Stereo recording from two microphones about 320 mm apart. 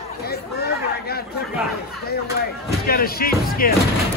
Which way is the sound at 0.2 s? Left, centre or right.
Left.